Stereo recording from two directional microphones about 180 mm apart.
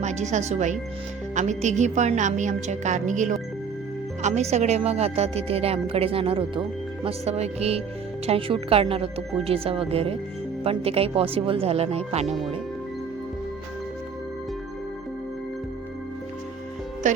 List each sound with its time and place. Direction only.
0.0 s speech: 40° right (ahead or behind)